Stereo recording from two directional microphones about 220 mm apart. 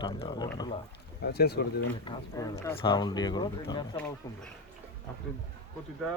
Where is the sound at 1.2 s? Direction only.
45° left (ahead or behind).